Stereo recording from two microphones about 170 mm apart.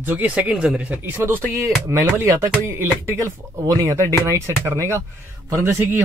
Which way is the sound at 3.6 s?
20° right (ahead or behind).